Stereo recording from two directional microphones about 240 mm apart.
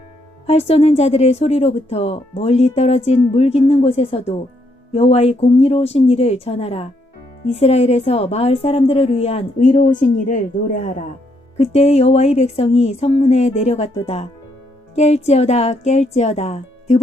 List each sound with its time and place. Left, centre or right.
0.4 s a woman's voice: left
14.9 s a woman's voice: left